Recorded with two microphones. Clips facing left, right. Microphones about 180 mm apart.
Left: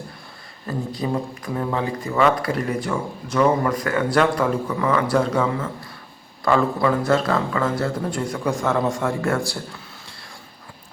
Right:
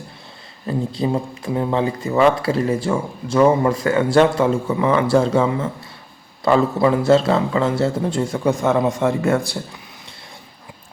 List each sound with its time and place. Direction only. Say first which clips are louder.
0.7 s speech: right 4 dB; 25° right (ahead or behind)